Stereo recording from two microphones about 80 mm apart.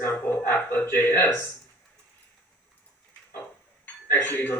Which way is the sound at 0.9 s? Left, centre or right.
Left.